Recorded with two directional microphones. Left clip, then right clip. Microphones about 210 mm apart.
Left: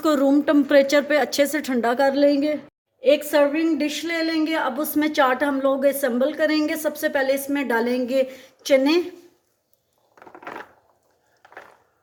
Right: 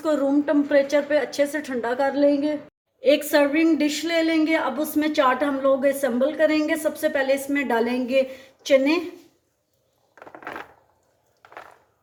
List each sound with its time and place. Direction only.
0.0 s a woman's voice: 45° left (ahead or behind)
3.0 s a woman's voice: 10° left (ahead or behind); by 9.0 s 30° left (ahead or behind)
10.2 s a sound: 5° right (ahead or behind)